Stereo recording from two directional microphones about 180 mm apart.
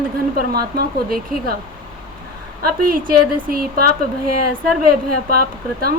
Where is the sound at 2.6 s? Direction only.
50° right (ahead or behind).